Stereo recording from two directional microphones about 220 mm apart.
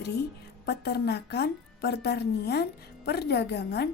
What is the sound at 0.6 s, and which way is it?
A woman's voice, 50° left (ahead or behind).